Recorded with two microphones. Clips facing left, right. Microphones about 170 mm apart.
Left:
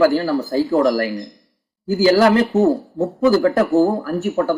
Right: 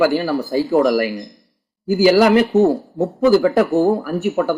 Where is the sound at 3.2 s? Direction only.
15° right (ahead or behind).